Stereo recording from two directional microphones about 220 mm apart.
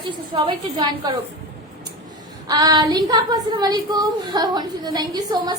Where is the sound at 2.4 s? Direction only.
15° right (ahead or behind).